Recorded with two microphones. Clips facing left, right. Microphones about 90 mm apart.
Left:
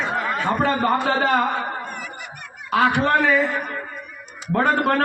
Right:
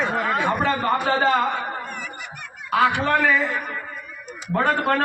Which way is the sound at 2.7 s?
20° left (ahead or behind).